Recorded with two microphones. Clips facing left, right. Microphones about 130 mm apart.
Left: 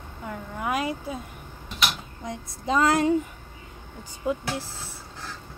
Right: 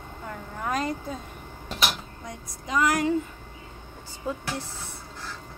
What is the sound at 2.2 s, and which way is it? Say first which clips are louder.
Female singing: left 9 dB; 30° left (ahead or behind).